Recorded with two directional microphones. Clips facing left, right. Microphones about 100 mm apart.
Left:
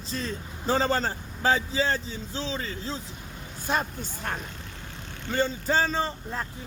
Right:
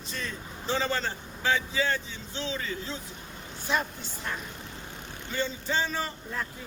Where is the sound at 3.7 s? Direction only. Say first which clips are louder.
Left 2 dB; 45° left (ahead or behind).